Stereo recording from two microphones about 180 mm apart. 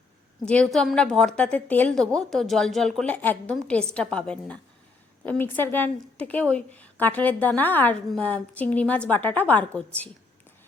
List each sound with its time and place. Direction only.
0.4 s a woman's voice: 5° left (ahead or behind)